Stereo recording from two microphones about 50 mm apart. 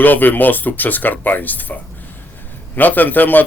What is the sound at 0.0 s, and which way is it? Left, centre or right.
Speech, left.